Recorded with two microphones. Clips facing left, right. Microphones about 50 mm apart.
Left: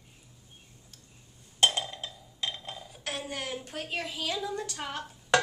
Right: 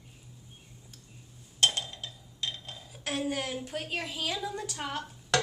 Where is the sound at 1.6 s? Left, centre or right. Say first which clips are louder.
Left 2 dB; centre.